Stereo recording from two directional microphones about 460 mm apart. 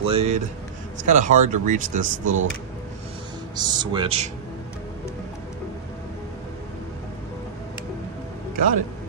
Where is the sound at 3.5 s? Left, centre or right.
Centre.